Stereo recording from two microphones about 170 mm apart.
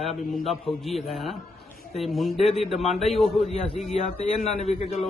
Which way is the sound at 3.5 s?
40° left (ahead or behind).